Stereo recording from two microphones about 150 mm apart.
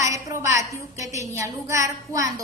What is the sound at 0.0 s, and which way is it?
A woman's voice, 20° right (ahead or behind).